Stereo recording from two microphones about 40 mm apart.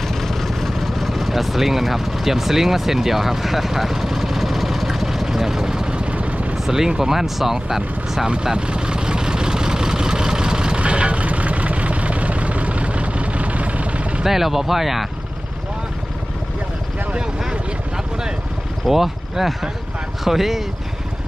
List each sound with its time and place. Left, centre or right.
0.1 s vehicle: centre; by 6.5 s right
6.7 s speech: centre
8.5 s vehicle: right
10.8 s vehicle: right
14.3 s speech: centre
17.4 s vehicle: centre
18.9 s speech: centre